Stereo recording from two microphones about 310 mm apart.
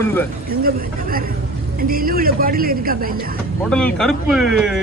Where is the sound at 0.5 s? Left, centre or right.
Right.